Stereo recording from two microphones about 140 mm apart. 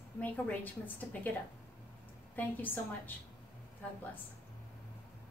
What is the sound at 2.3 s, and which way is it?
Speech, 15° left (ahead or behind).